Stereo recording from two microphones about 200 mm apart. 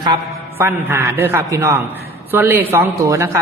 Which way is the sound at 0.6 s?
10° right (ahead or behind).